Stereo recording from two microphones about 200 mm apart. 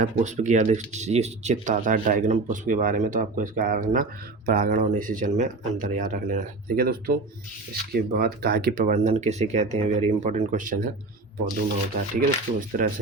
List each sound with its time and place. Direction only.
0.0 s speech: 35° right (ahead or behind)
11.9 s speech: 45° right (ahead or behind)